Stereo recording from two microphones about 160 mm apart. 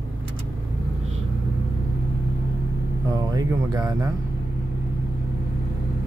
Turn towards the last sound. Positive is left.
turn(degrees=-25)  # may be behind; listen again after turning